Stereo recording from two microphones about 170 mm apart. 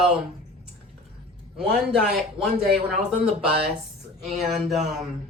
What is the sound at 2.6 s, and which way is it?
Speech, 65° right (ahead or behind).